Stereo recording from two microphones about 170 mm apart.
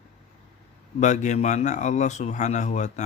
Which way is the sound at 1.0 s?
45° left (ahead or behind).